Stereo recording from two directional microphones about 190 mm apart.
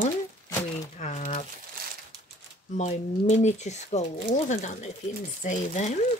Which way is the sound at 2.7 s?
40° left (ahead or behind).